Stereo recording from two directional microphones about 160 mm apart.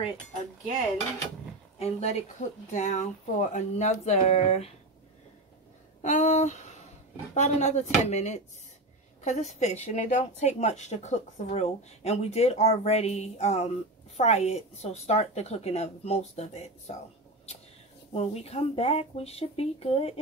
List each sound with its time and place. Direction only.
1.8 s a woman's voice: 40° left (ahead or behind)
6.0 s a woman's voice: 45° left (ahead or behind)
18.1 s a woman's voice: 40° left (ahead or behind)